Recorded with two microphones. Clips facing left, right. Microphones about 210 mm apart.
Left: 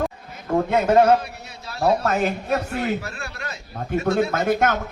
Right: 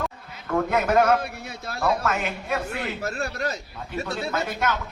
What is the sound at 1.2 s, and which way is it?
Speech, 55° right (ahead or behind).